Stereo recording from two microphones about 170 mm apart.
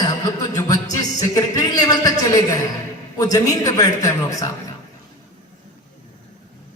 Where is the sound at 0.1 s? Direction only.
20° left (ahead or behind).